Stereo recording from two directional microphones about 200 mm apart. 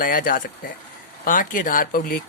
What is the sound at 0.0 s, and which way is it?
Speech, 45° left (ahead or behind).